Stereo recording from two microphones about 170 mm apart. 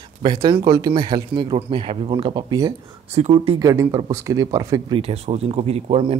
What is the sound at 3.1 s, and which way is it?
Speech, 40° right (ahead or behind).